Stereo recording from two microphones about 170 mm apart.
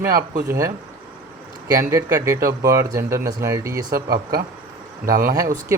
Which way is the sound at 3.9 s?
65° right (ahead or behind).